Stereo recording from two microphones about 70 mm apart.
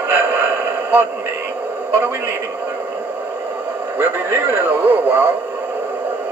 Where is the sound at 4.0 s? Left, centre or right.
Right.